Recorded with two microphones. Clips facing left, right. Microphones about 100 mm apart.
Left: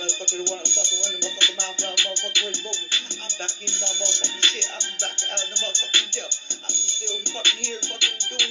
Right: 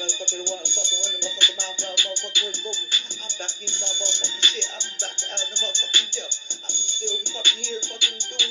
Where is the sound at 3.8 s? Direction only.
60° left (ahead or behind).